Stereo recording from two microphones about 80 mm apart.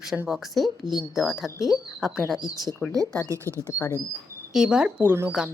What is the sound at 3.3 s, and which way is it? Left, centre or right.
Speech, right.